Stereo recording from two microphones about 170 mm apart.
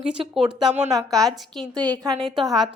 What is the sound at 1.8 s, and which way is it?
Speech, 20° right (ahead or behind).